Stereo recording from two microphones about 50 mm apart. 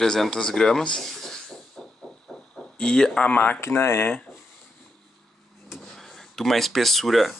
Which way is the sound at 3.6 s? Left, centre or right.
Left.